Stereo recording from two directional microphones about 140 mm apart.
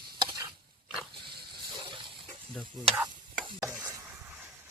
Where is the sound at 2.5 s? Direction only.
5° left (ahead or behind).